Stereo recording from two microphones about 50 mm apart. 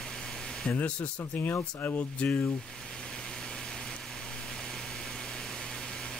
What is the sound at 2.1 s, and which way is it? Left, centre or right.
Speech, left.